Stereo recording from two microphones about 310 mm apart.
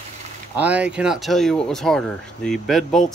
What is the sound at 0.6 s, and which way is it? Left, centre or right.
Speech, centre.